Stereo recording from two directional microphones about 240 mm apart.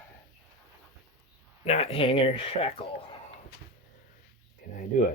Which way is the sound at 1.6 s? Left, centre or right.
Left.